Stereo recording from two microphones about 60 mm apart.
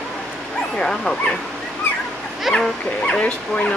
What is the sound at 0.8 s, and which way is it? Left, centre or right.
Speech, centre.